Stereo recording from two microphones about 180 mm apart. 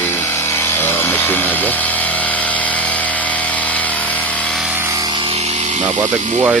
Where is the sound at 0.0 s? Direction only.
15° left (ahead or behind).